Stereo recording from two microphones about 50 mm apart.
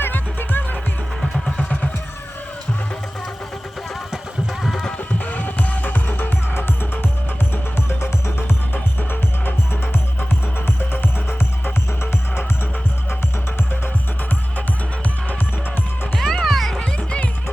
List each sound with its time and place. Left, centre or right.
0.0 s music: left
1.5 s music: left
4.6 s music: centre
5.2 s music: left
8.4 s music: left
10.9 s music: left
16.1 s music: centre
16.7 s music: centre